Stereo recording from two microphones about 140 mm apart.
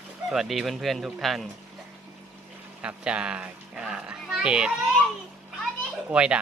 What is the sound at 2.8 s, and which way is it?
A child's voice, 5° right (ahead or behind).